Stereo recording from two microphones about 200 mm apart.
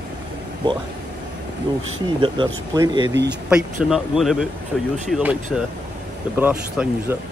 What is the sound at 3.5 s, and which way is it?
A man's voice, 5° right (ahead or behind).